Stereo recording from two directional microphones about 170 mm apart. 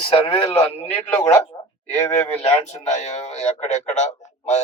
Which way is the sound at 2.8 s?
40° left (ahead or behind).